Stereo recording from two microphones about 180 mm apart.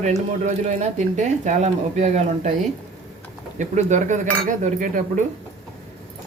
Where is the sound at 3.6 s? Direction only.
40° right (ahead or behind).